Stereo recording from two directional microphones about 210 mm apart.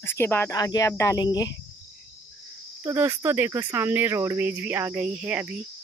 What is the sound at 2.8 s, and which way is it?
Speech, 15° right (ahead or behind).